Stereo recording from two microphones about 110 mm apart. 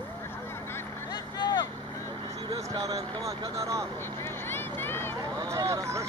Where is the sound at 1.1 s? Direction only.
40° left (ahead or behind).